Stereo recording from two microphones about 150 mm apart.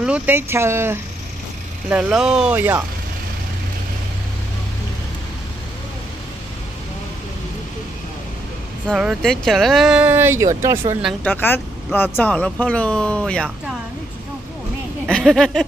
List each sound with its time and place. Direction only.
0.0 s speech: 10° right (ahead or behind)
1.9 s speech: 5° right (ahead or behind)
8.9 s speech: 5° right (ahead or behind)
11.2 s speech: 15° left (ahead or behind)
15.0 s speech: 5° left (ahead or behind)